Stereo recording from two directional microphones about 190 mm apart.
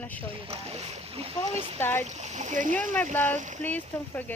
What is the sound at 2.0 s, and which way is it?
Speech, 35° right (ahead or behind).